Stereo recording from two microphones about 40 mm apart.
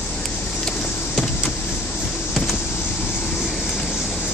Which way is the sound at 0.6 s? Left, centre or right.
Centre.